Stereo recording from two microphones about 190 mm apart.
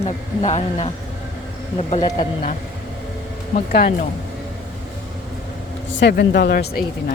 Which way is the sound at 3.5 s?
50° left (ahead or behind).